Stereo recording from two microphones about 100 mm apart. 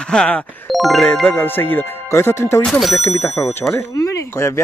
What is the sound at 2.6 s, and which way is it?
Speech, centre (ahead or behind).